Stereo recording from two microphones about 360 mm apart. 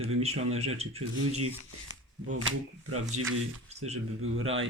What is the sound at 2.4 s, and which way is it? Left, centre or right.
Speech, right.